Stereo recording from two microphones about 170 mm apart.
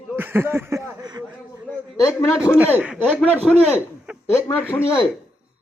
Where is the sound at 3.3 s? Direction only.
5° left (ahead or behind).